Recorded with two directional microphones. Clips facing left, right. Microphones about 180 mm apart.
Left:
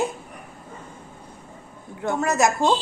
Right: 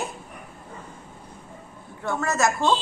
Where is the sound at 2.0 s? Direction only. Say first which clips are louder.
Left 3 dB; 20° left (ahead or behind).